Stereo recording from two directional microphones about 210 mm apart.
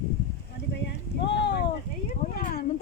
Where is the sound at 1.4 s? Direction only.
55° left (ahead or behind).